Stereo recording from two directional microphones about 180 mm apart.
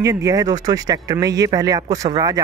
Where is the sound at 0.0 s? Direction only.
20° right (ahead or behind).